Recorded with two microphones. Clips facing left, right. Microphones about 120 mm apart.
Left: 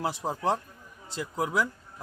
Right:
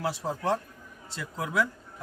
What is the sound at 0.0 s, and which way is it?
Speech, 25° left (ahead or behind).